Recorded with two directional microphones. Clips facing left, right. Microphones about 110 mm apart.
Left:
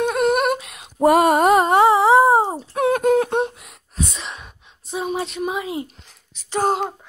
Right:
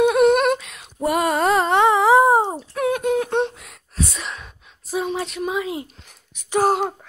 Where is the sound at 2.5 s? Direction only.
25° left (ahead or behind).